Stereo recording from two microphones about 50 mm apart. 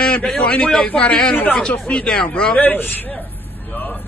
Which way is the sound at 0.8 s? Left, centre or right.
Left.